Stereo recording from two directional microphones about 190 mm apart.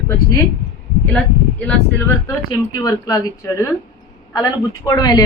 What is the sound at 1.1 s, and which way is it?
A woman's voice, 5° left (ahead or behind).